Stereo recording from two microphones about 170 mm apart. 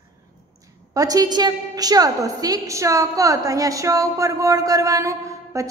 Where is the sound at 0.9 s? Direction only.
20° right (ahead or behind).